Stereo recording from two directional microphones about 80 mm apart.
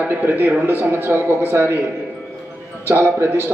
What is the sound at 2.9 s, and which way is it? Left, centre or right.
Speech, right.